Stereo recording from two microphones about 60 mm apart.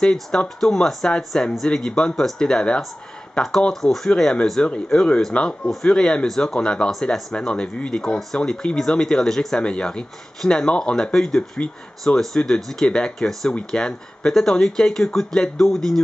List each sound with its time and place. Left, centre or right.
0.0 s speech: centre
7.3 s speech: centre